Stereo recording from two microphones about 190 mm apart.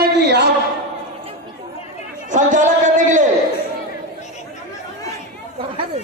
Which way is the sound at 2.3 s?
40° right (ahead or behind).